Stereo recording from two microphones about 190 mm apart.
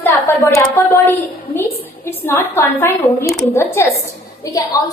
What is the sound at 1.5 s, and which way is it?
A woman's voice, 10° left (ahead or behind).